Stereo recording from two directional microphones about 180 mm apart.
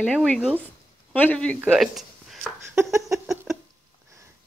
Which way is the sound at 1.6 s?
5° right (ahead or behind).